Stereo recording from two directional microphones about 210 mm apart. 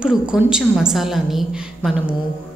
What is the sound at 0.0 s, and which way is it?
A woman's voice, 5° right (ahead or behind).